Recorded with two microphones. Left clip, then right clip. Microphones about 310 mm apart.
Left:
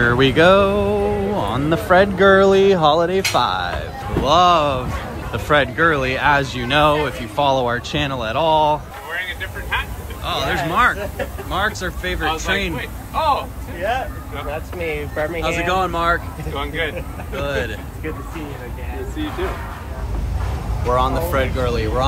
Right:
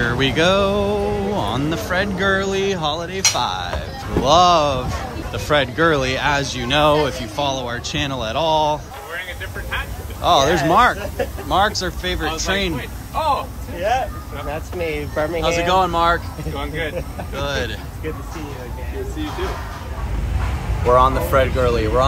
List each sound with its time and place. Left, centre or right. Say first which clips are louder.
0.0 s music: left 4 dB; centre
3.3 s speech: left 3 dB; centre
11.4 s music: right 4 dB; centre
14.8 s speech: right 1 dB; right
15.4 s music: right 3 dB; centre
20.9 s music: right 4 dB; centre